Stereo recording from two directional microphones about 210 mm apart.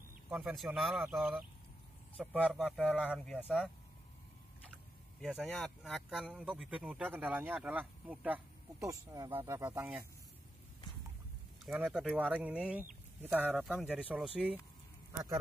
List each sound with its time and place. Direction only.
0.3 s speech: centre (ahead or behind)
5.2 s speech: centre (ahead or behind)
11.6 s speech: 5° right (ahead or behind)